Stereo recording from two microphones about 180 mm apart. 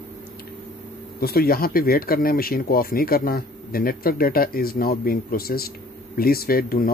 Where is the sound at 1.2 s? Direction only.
60° left (ahead or behind).